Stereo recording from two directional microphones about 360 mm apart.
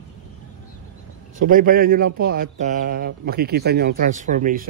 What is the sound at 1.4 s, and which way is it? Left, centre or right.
A man's voice, right.